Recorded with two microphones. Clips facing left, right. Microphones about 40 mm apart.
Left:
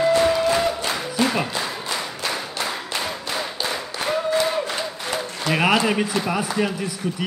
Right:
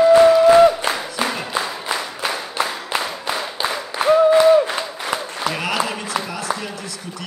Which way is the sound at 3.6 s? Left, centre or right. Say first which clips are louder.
Right 4 dB; right.